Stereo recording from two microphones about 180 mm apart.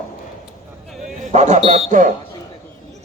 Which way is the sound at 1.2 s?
40° right (ahead or behind).